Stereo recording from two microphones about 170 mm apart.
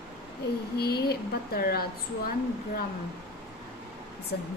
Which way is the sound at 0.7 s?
70° left (ahead or behind).